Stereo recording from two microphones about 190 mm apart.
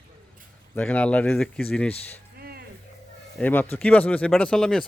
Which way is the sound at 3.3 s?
10° left (ahead or behind).